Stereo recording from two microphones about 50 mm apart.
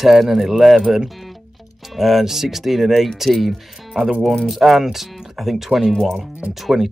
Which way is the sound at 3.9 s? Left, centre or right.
Centre.